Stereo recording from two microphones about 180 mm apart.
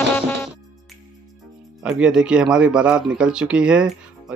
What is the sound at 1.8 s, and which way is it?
Speech, 5° right (ahead or behind).